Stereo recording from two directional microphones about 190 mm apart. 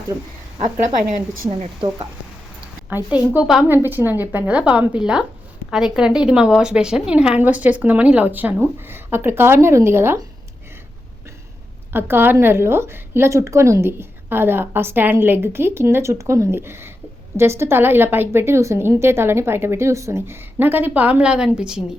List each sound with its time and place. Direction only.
1.5 s speech: 25° right (ahead or behind)
2.9 s a woman's voice: 10° right (ahead or behind)
11.9 s a woman's voice: 10° right (ahead or behind)